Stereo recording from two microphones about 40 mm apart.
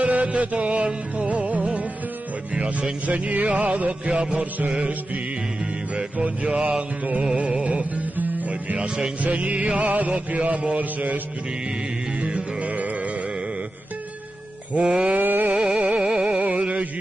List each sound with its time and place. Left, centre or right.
0.0 s music: right
2.5 s speech: right
3.1 s music: right
6.5 s music: right
8.7 s music: right
9.2 s music: right
12.2 s music: right
14.7 s music: right
15.1 s a sound: right
15.5 s music: centre
16.3 s music: right